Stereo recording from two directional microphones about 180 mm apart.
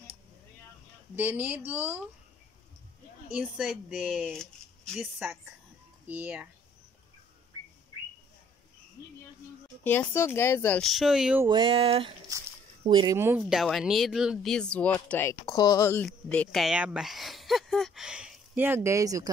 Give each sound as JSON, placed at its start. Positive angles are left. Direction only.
{"t": 1.1, "sound": "a woman's voice", "side_deg": -10}
{"t": 3.3, "sound": "a woman's voice", "side_deg": -5}
{"t": 9.8, "sound": "speech", "side_deg": 10}
{"t": 11.4, "sound": "a sound", "side_deg": -25}
{"t": 12.3, "sound": "speech", "side_deg": -20}
{"t": 13.1, "sound": "speech", "side_deg": -15}
{"t": 16.1, "sound": "speech", "side_deg": 5}